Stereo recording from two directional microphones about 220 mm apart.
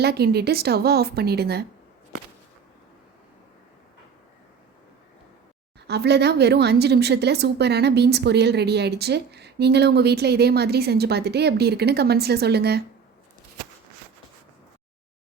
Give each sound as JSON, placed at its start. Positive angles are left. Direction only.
{"t": 0.0, "sound": "a woman's voice", "side_deg": -45}
{"t": 5.9, "sound": "a woman's voice", "side_deg": -50}